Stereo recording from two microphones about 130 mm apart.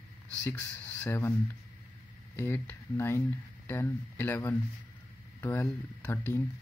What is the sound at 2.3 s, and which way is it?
Speech, 20° left (ahead or behind).